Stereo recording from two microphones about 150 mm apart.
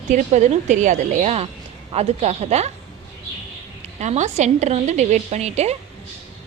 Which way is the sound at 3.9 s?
50° right (ahead or behind).